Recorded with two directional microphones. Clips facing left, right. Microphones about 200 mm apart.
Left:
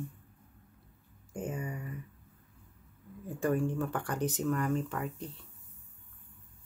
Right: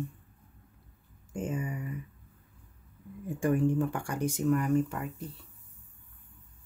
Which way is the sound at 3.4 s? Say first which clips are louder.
Right 4 dB; 15° right (ahead or behind).